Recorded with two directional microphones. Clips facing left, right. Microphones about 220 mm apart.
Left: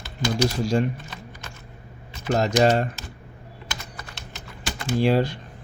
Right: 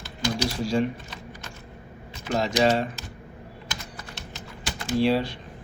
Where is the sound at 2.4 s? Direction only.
50° left (ahead or behind).